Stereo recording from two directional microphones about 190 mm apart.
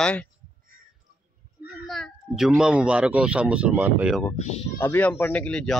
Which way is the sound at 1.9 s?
Centre (ahead or behind).